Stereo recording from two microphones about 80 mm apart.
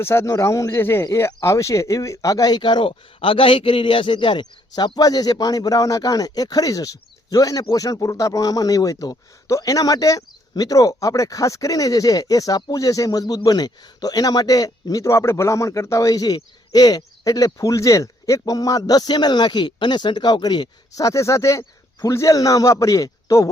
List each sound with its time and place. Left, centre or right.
0.0 s speech: left
4.9 s speech: left
15.0 s speech: left
21.0 s speech: left